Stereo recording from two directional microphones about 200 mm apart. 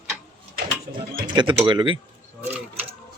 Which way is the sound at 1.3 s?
25° right (ahead or behind).